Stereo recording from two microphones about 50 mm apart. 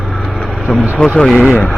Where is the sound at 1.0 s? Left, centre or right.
Centre.